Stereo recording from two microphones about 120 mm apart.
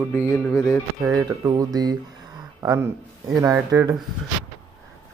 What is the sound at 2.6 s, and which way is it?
Music, 25° right (ahead or behind).